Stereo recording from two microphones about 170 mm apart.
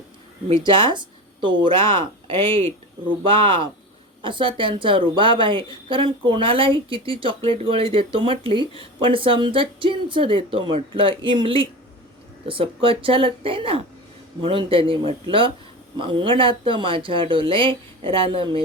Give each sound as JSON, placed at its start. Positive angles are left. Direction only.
{"t": 0.4, "sound": "a woman's voice", "side_deg": -30}